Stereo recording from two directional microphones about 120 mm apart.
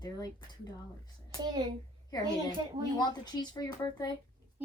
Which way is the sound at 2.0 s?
35° left (ahead or behind).